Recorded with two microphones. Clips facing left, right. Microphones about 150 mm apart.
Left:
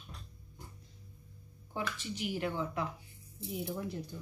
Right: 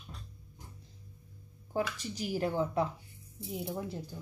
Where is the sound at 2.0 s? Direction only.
40° right (ahead or behind).